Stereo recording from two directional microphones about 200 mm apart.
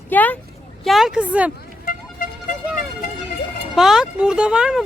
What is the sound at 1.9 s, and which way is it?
Vehicle, 40° left (ahead or behind).